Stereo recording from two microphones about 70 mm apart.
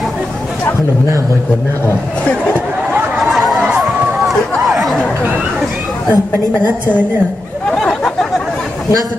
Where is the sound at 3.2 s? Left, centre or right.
Centre.